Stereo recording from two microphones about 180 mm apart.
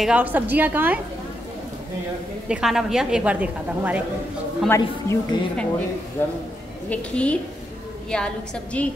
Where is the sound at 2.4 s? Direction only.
5° right (ahead or behind).